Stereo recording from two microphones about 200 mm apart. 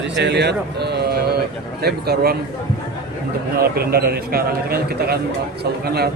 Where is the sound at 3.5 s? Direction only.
50° right (ahead or behind).